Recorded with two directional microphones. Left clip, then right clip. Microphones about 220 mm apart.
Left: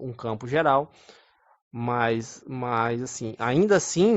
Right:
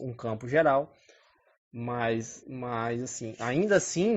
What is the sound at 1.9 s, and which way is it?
Speech, 15° left (ahead or behind).